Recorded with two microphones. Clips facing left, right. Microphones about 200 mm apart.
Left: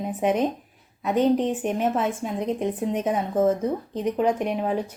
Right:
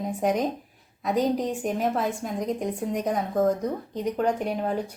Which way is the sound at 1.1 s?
35° right (ahead or behind).